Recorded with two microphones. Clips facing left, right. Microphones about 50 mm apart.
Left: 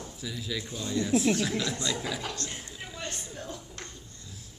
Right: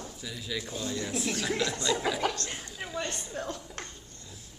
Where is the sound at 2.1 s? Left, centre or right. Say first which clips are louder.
Right 6 dB; right.